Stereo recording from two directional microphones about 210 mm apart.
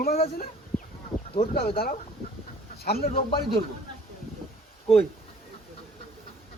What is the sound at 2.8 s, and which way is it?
Speech, 45° left (ahead or behind).